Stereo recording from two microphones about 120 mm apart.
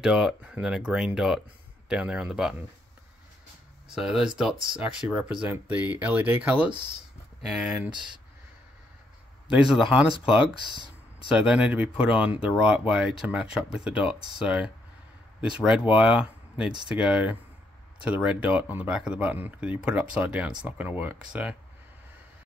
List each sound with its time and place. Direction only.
0.0 s speech: 5° right (ahead or behind)
3.9 s speech: 5° right (ahead or behind)
9.5 s speech: 5° right (ahead or behind)
10.7 s a sound: 40° right (ahead or behind)
11.3 s speech: 10° right (ahead or behind)